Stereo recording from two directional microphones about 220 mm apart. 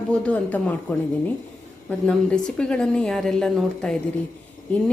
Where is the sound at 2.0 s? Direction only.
5° left (ahead or behind).